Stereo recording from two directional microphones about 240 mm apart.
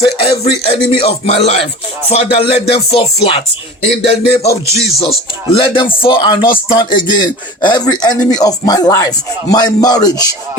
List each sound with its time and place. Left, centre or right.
0.6 s speech: left
4.6 s music: centre
4.9 s speech: left